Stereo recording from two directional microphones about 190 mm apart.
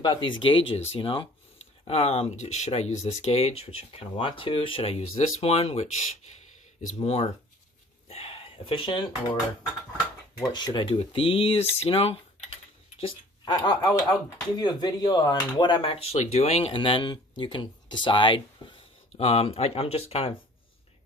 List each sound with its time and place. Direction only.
0.0 s speech: 25° left (ahead or behind)
10.5 s speech: 20° left (ahead or behind)
13.0 s speech: 20° left (ahead or behind)